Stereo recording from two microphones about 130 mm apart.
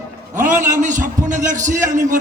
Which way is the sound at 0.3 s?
75° right (ahead or behind).